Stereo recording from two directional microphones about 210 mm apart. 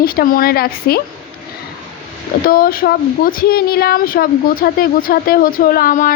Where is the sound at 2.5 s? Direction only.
45° left (ahead or behind).